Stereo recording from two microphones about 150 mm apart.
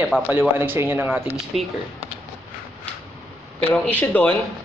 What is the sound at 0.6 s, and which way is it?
Speech, 15° right (ahead or behind).